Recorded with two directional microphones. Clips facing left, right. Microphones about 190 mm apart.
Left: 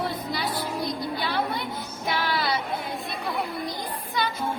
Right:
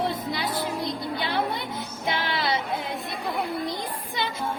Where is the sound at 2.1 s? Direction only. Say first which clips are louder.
Even; 20° right (ahead or behind).